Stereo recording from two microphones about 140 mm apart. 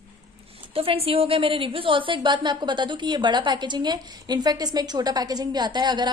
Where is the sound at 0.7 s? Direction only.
45° right (ahead or behind).